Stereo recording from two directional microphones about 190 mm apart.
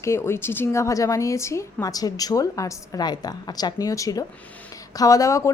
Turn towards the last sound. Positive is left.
turn(degrees=15)  # may be behind; listen again after turning